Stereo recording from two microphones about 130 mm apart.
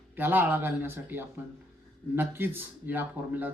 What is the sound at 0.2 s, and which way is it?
A man's voice, 15° right (ahead or behind).